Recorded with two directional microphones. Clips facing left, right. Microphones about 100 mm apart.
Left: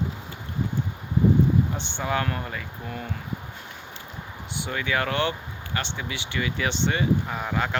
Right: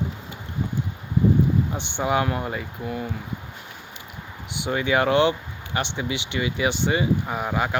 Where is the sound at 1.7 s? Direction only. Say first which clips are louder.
Right 4 dB; 15° right (ahead or behind).